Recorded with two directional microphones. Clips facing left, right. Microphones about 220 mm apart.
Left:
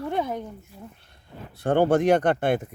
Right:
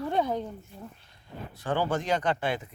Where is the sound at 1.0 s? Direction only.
60° left (ahead or behind).